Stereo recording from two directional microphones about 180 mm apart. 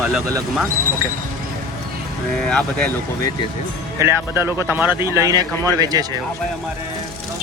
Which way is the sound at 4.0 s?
15° right (ahead or behind).